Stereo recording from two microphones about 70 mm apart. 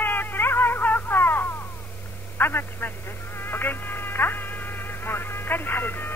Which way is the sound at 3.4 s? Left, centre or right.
Left.